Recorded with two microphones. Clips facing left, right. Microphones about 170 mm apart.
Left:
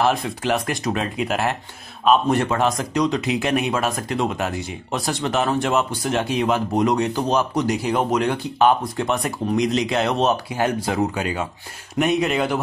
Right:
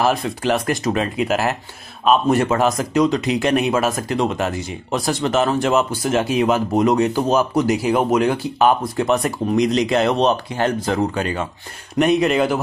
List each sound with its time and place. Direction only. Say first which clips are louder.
0.0 s speech: right 2 dB; centre (ahead or behind)